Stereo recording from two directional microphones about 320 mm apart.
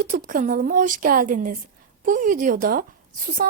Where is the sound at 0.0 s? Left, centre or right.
Right.